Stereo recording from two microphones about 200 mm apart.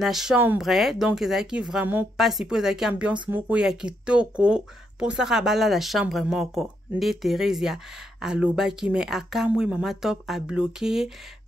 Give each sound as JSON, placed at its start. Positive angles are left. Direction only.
{"t": 0.0, "sound": "speech", "side_deg": 0}